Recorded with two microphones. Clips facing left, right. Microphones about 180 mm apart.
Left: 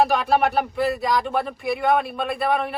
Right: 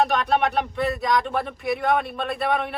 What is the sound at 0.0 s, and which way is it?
Speech, centre (ahead or behind).